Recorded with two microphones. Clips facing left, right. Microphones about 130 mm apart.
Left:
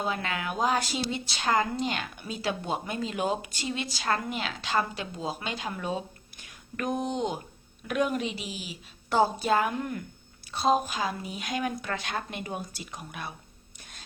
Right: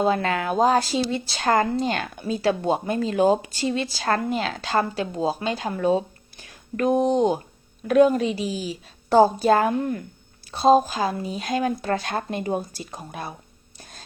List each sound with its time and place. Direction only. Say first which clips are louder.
0.0 s speech: right 9 dB; 40° right (ahead or behind)